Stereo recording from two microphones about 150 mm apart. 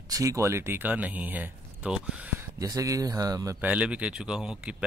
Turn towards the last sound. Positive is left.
turn(degrees=-5)  # may be behind; listen again after turning